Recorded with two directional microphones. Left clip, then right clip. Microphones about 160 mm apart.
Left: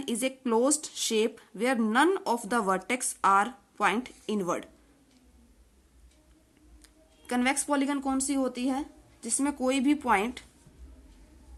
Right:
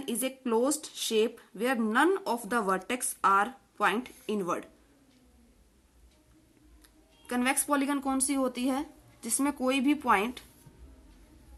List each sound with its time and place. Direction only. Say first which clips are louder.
0.0 s speech: left 3 dB; 35° left (ahead or behind)
7.3 s speech: left 2 dB; 30° left (ahead or behind)
7.6 s a woman's voice: even; 15° left (ahead or behind)